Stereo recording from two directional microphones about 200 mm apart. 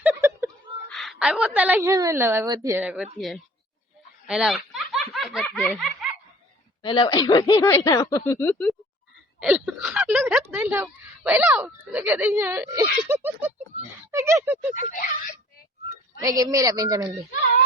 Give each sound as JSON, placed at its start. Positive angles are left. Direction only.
{"t": 0.0, "sound": "a sound", "side_deg": -10}
{"t": 0.9, "sound": "speech", "side_deg": 0}
{"t": 6.8, "sound": "speech", "side_deg": 20}
{"t": 9.4, "sound": "speech", "side_deg": -5}
{"t": 13.7, "sound": "a sound", "side_deg": -35}
{"t": 14.1, "sound": "speech", "side_deg": -15}
{"t": 16.2, "sound": "speech", "side_deg": -20}